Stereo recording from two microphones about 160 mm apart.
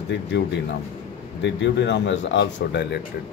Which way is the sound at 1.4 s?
90° left.